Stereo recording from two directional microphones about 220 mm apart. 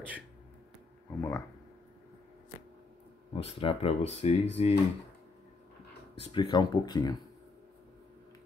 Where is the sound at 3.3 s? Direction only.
25° left (ahead or behind).